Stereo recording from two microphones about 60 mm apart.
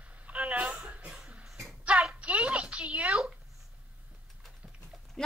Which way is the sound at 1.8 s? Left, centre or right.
Right.